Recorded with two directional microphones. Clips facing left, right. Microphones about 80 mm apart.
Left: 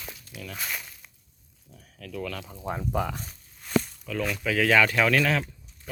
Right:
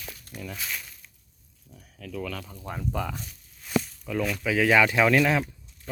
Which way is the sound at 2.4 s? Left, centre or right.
Centre.